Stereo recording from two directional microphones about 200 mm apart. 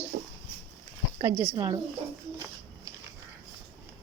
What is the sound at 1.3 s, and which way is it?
Speech, 15° right (ahead or behind).